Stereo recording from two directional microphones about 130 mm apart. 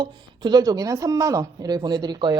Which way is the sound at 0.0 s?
35° right (ahead or behind).